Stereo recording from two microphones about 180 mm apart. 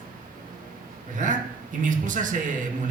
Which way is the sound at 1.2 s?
45° right (ahead or behind).